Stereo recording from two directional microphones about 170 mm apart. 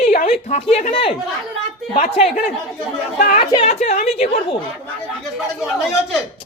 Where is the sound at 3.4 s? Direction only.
35° left (ahead or behind).